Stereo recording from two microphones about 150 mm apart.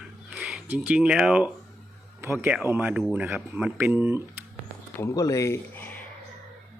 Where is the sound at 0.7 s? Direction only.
5° right (ahead or behind).